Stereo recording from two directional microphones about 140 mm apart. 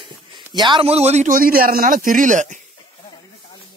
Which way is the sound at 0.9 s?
50° right (ahead or behind).